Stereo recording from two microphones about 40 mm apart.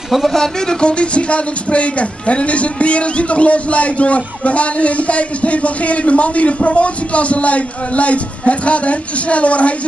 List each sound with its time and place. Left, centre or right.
0.1 s speech: centre
0.4 s speech: centre; by 9.8 s left